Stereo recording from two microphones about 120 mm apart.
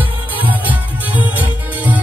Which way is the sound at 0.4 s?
15° right (ahead or behind).